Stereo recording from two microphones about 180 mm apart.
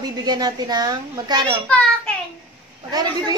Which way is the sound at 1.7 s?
5° left (ahead or behind).